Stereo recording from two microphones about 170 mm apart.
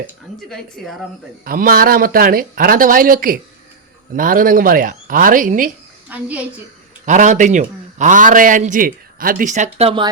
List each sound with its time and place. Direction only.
0.5 s a woman's voice: centre (ahead or behind)
1.5 s a man's voice: 55° right (ahead or behind)
6.1 s a woman's voice: 10° right (ahead or behind)
7.0 s a man's voice: 45° right (ahead or behind)
9.7 s speech: 35° right (ahead or behind)